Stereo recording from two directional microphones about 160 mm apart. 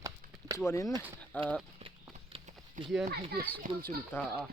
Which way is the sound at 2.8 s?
55° right (ahead or behind).